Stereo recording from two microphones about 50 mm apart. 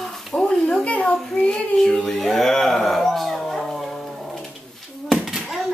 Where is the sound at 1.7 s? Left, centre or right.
Centre.